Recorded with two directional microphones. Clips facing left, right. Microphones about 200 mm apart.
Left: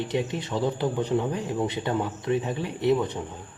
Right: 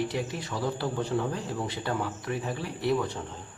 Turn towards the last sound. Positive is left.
turn(degrees=20)  # may be behind; listen again after turning